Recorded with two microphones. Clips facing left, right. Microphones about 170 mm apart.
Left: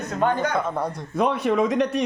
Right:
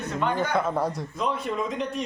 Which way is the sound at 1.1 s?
65° left (ahead or behind).